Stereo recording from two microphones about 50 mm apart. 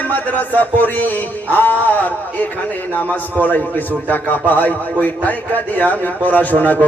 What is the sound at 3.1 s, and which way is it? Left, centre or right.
Speech, left.